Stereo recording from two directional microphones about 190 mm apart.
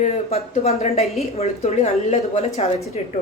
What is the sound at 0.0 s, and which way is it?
Speech, 35° left (ahead or behind).